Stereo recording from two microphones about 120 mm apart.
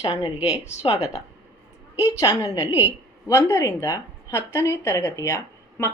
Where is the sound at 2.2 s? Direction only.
30° left (ahead or behind).